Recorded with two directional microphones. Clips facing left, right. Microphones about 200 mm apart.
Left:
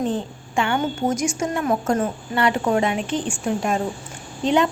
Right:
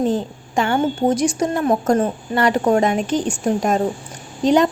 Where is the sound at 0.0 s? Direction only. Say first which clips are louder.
Right 4 dB; 40° right (ahead or behind).